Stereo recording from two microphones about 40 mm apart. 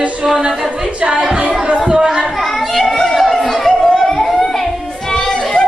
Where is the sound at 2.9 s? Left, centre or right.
Centre.